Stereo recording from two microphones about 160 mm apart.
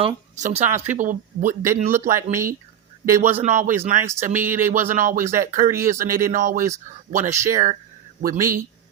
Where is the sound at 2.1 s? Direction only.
15° right (ahead or behind).